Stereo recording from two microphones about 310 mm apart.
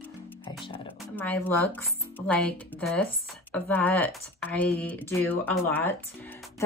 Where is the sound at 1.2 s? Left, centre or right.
Centre.